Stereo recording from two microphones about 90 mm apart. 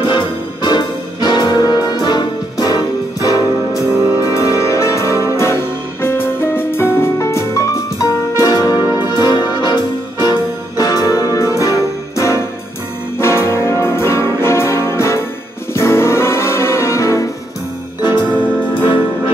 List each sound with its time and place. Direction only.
0.0 s music: 65° left (ahead or behind); by 8.7 s 45° left (ahead or behind)
8.9 s music: 55° left (ahead or behind); by 14.3 s 30° left (ahead or behind)
14.4 s brass instrument: 30° left (ahead or behind)
15.7 s music: 30° left (ahead or behind)
18.8 s music: 80° left